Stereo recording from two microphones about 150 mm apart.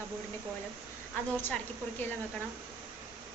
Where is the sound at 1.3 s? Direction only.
10° left (ahead or behind).